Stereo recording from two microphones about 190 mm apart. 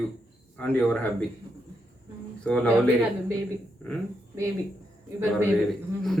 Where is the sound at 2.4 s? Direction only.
5° left (ahead or behind).